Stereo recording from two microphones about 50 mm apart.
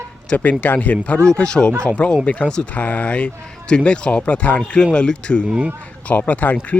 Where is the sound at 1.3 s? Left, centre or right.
Centre.